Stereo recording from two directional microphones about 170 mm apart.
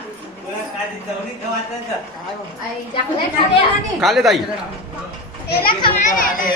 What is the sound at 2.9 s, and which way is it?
Speech, 30° left (ahead or behind).